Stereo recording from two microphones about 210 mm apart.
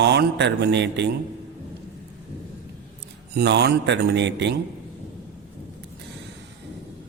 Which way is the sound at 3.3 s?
55° right (ahead or behind).